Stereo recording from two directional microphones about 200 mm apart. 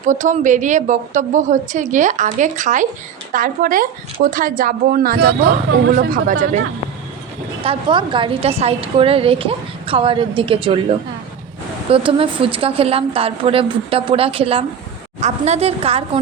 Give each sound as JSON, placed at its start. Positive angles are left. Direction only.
{"t": 0.0, "sound": "a woman's voice", "side_deg": -40}
{"t": 7.6, "sound": "a woman's voice", "side_deg": -25}
{"t": 11.9, "sound": "a woman's voice", "side_deg": -25}